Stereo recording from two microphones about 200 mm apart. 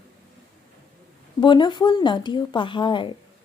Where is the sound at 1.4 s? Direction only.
25° left (ahead or behind).